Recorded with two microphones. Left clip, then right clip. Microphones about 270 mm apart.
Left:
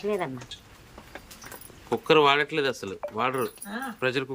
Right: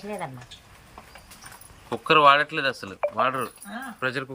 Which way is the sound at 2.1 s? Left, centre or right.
Centre.